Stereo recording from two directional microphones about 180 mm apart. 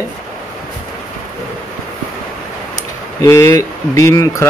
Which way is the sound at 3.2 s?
15° left (ahead or behind).